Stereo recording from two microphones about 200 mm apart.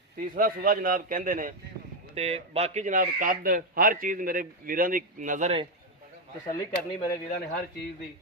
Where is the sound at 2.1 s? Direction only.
30° right (ahead or behind).